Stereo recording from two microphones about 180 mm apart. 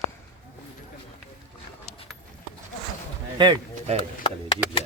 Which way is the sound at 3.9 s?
35° right (ahead or behind).